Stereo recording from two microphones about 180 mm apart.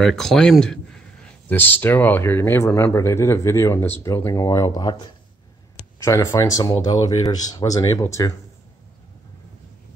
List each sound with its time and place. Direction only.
0.0 s speech: centre (ahead or behind); by 4.9 s 20° left (ahead or behind)
6.0 s speech: 15° left (ahead or behind)